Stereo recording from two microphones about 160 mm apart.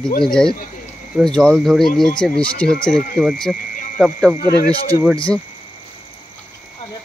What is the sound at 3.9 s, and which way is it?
Speech, 5° right (ahead or behind).